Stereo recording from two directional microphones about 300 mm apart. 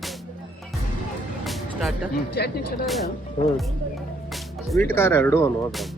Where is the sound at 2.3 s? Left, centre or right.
Left.